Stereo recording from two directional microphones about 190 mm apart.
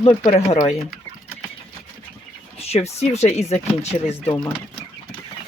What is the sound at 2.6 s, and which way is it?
Speech, 35° left (ahead or behind).